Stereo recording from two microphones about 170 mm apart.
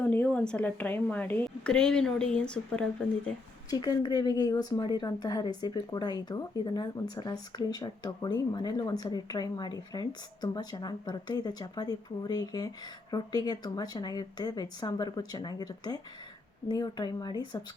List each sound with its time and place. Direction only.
0.0 s a woman's voice: 10° left (ahead or behind)
3.7 s speech: 25° left (ahead or behind)